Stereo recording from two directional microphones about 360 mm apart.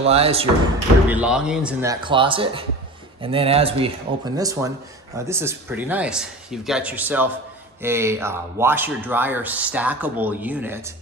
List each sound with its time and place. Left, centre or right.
0.0 s speech: centre
1.0 s speech: centre